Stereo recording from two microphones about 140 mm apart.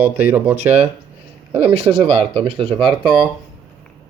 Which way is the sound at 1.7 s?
45° right (ahead or behind).